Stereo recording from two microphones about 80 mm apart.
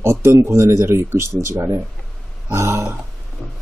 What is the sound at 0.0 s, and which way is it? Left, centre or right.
Speech, right.